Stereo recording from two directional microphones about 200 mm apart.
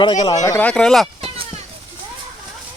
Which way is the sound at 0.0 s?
20° left (ahead or behind).